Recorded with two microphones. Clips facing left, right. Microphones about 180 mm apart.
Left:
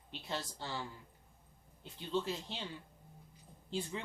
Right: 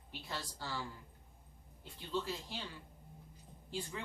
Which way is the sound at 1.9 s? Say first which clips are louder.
Left 3 dB; 20° left (ahead or behind).